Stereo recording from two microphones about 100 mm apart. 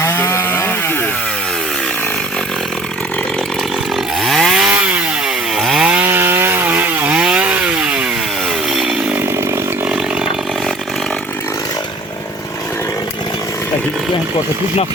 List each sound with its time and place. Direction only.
0.0 s chainsaw: 25° left (ahead or behind)
4.2 s chainsaw: centre (ahead or behind)
5.5 s chainsaw: 5° right (ahead or behind)
6.1 s wood: 20° right (ahead or behind)
8.7 s chainsaw: 5° right (ahead or behind)